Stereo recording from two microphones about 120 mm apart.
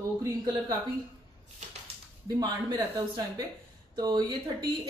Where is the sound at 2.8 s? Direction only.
30° right (ahead or behind).